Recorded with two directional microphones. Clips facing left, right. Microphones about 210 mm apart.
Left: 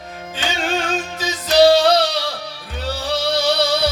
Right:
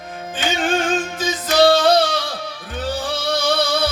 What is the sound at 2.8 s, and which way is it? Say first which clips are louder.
Music: left 1 dB; 50° right (ahead or behind).